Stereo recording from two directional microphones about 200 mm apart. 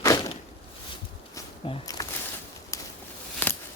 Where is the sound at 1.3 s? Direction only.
15° left (ahead or behind).